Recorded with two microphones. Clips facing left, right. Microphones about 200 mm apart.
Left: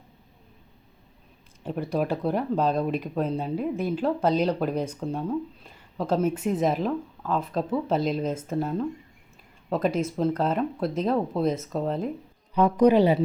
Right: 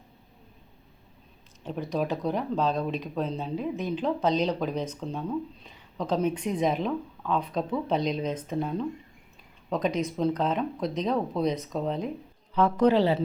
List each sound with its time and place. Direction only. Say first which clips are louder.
1.6 s speech: left 2 dB; 10° left (ahead or behind)
12.5 s speech: left 3 dB; 15° left (ahead or behind)